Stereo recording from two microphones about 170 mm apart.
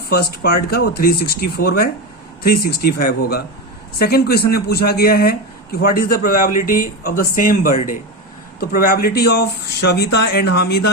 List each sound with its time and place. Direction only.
0.1 s speech: 65° left (ahead or behind)